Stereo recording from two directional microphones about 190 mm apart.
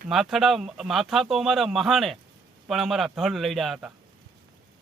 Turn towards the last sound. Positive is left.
turn(degrees=-5)  # may be behind; listen again after turning